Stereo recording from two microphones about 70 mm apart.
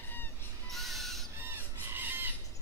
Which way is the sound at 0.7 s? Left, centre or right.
Centre.